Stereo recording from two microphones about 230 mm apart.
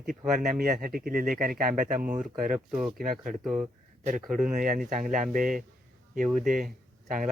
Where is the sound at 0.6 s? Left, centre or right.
Right.